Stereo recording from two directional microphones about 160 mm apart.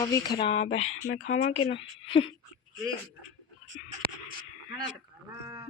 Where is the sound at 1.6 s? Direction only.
35° left (ahead or behind).